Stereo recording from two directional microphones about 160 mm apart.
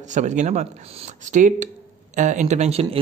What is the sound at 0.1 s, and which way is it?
Speech, 50° right (ahead or behind).